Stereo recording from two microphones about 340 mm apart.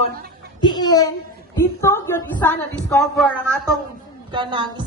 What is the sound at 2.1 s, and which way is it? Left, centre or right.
Speech, centre.